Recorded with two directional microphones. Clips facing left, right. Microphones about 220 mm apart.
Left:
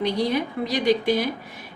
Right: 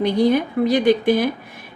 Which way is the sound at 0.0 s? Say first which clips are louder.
Right 6 dB; 50° right (ahead or behind).